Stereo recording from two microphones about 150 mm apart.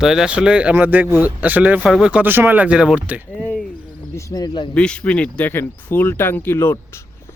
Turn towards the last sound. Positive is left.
turn(degrees=15)  # may be behind; listen again after turning